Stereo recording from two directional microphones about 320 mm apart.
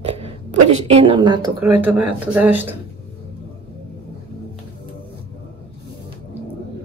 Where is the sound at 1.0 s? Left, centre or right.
Centre.